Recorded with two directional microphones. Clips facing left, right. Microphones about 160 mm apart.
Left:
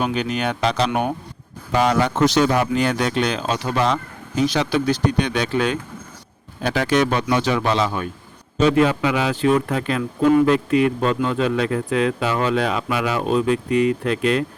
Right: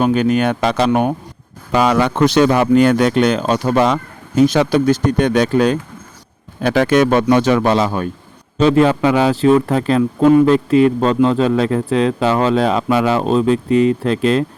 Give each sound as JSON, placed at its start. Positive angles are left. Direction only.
{"t": 0.0, "sound": "speech", "side_deg": -50}
{"t": 1.7, "sound": "speech", "side_deg": -90}
{"t": 6.6, "sound": "a man's voice", "side_deg": -55}